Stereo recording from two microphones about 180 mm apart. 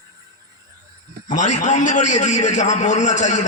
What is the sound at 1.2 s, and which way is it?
A man's voice, 45° left (ahead or behind).